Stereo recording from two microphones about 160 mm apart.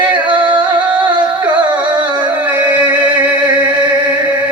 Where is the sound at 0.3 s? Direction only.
30° right (ahead or behind).